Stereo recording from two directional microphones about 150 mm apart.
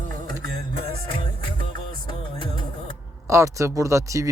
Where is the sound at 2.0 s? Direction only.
30° left (ahead or behind).